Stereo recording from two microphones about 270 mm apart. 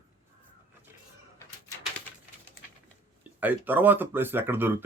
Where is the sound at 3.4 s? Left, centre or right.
Centre.